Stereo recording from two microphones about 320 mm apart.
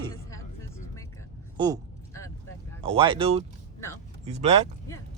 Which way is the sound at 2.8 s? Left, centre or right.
Centre.